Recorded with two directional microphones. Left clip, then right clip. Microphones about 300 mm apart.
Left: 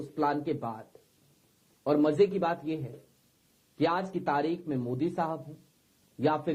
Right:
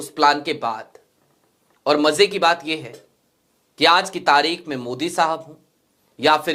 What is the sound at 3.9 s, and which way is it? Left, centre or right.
Speech, centre.